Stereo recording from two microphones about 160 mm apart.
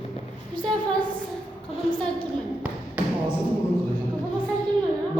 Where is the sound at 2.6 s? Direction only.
10° right (ahead or behind).